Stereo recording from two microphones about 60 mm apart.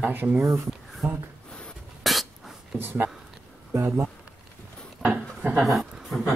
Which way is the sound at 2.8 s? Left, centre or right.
Right.